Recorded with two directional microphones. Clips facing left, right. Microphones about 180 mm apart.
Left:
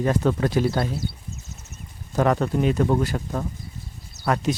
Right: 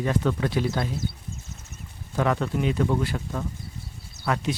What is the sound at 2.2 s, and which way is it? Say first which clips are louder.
Speech: left 4 dB; 40° left (ahead or behind).